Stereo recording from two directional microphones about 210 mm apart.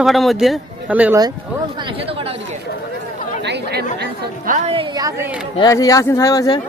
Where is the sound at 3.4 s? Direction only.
55° right (ahead or behind).